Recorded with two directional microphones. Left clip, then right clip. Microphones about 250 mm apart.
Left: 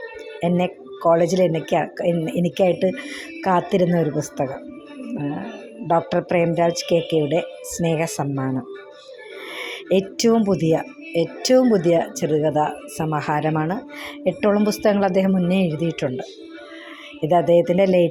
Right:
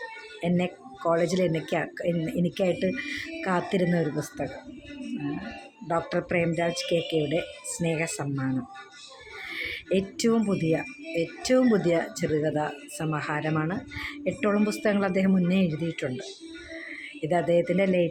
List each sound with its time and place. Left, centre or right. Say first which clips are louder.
0.4 s speech: left 7 dB; centre
5.9 s speech: left 8 dB; centre
17.2 s speech: left 8 dB; centre